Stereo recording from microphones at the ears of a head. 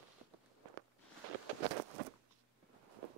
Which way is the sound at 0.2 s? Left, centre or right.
Right.